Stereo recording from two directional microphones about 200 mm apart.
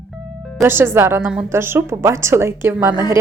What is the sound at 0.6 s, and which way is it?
A woman's voice, 10° right (ahead or behind).